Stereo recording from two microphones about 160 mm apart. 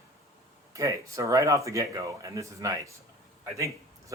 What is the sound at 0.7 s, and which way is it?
Speech, 20° right (ahead or behind).